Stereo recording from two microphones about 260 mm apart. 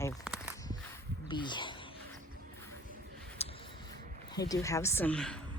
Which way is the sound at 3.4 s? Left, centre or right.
Left.